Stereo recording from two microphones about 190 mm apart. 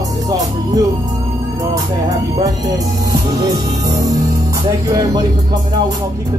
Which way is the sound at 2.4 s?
20° right (ahead or behind).